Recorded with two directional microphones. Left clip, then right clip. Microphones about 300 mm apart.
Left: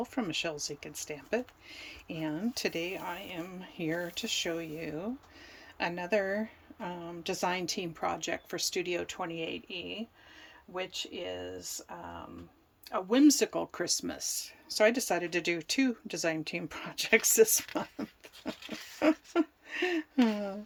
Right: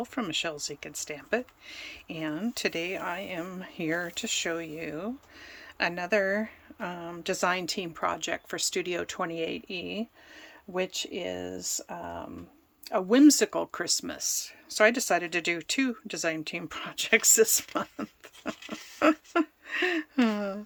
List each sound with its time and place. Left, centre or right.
0.0 s speech: centre